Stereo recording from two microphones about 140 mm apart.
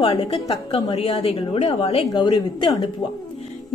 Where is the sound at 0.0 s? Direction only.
40° left (ahead or behind).